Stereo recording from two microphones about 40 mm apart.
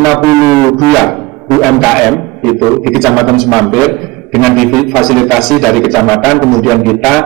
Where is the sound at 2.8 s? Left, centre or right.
Centre.